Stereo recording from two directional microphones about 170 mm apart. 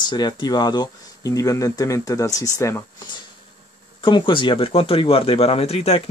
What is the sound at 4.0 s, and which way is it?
Speech, 30° left (ahead or behind).